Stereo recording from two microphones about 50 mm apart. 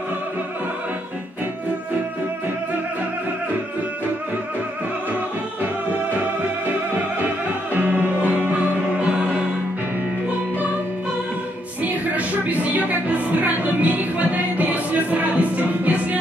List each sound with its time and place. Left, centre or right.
7.7 s music: right
8.8 s music: centre
11.8 s music: right